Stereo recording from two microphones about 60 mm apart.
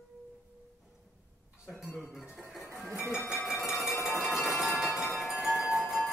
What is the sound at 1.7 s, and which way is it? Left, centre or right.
Music, centre.